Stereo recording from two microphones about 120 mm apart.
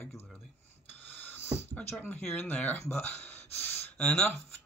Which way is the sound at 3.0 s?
15° left (ahead or behind).